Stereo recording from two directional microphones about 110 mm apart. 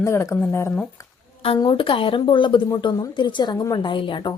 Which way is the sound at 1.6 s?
55° left (ahead or behind).